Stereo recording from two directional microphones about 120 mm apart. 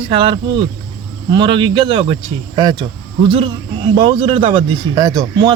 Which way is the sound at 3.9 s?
50° right (ahead or behind).